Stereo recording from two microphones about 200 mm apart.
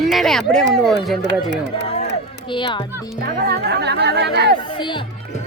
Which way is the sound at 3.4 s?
50° right (ahead or behind).